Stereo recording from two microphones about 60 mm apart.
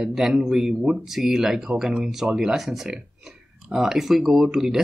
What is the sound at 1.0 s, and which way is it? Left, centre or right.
Speech, centre.